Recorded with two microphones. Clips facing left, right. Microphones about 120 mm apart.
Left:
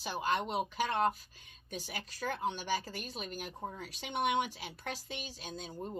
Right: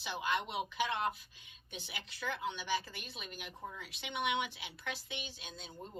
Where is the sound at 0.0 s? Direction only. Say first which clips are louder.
Left 3 dB; 40° left (ahead or behind).